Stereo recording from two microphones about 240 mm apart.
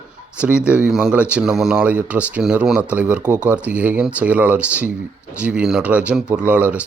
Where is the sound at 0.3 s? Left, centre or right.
Centre.